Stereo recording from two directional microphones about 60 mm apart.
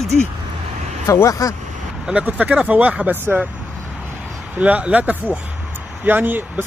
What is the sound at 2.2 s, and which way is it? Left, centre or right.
Speech, right.